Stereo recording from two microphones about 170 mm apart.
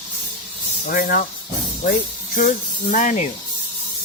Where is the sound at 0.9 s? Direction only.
60° left (ahead or behind).